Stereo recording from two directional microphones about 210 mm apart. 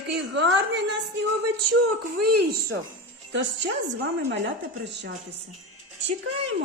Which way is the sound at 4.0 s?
60° right (ahead or behind).